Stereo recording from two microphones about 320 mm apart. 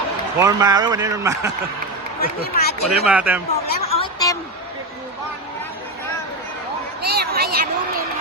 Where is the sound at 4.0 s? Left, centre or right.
Centre.